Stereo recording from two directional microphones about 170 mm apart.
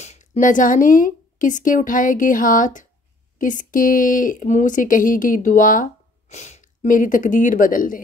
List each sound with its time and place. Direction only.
0.0 s a woman's voice: 40° left (ahead or behind)